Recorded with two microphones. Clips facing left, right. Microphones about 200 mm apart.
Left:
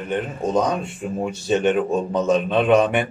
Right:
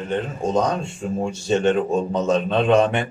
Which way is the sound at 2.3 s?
15° left (ahead or behind).